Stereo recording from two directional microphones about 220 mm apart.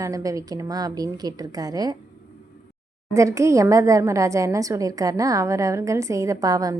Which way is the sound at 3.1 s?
15° right (ahead or behind).